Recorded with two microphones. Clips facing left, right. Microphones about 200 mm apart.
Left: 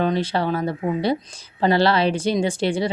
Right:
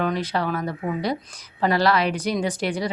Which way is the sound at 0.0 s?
30° left (ahead or behind).